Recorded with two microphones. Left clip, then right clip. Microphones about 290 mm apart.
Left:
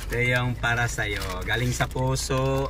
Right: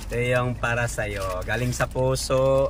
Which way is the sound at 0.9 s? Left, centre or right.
Right.